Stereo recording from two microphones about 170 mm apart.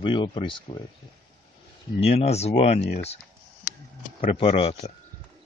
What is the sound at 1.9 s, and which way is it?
Speech, 35° left (ahead or behind).